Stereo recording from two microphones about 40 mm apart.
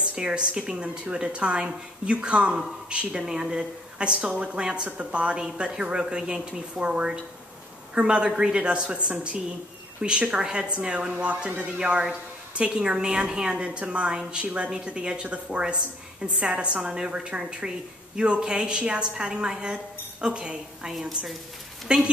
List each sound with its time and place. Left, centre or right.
0.0 s a woman's voice: right
0.8 s a woman's voice: right
15.2 s speech: right
15.6 s a woman's voice: right